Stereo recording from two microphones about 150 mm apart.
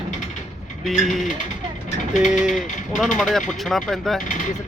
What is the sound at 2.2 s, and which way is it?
Speech, 55° left (ahead or behind).